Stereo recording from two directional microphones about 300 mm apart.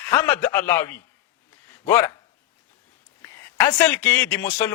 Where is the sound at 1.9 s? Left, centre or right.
Centre.